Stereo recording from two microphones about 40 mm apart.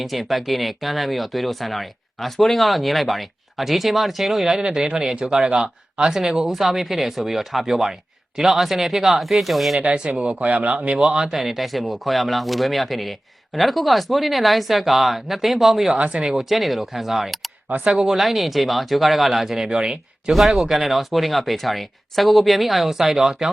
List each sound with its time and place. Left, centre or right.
0.0 s speech: centre
5.5 s speech: right
6.1 s speech: centre
9.8 s speech: right
10.4 s speech: right
10.8 s speech: right
11.3 s speech: centre
16.0 s speech: right
16.2 s speech: centre
19.8 s speech: centre
20.7 s speech: centre